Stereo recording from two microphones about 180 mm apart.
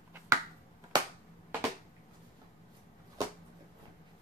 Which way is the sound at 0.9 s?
20° right (ahead or behind).